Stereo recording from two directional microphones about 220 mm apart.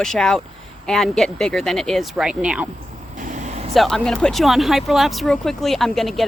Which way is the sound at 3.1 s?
35° right (ahead or behind).